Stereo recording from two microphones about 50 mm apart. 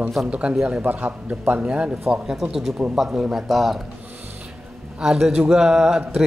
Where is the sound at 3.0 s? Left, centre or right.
Centre.